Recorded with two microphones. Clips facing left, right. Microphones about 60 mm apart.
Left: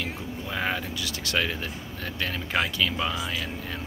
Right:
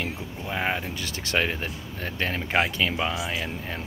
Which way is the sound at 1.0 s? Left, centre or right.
Right.